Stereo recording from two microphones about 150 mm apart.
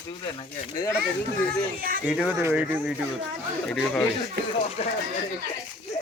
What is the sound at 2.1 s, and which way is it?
Speech, 5° right (ahead or behind).